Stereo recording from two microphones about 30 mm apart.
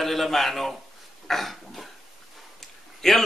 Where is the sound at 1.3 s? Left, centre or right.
Centre.